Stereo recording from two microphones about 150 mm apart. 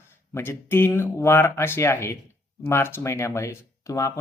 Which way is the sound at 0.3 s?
15° left (ahead or behind).